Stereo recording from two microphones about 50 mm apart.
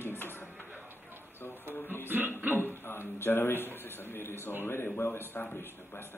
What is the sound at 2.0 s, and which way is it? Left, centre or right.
Music, right.